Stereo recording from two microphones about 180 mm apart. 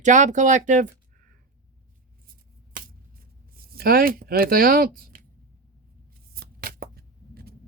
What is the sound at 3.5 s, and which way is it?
Speech, 55° right (ahead or behind).